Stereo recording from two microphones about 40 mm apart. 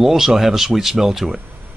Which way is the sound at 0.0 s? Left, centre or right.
Centre.